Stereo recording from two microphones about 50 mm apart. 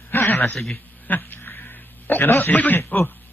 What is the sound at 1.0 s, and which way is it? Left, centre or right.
A man's voice, left.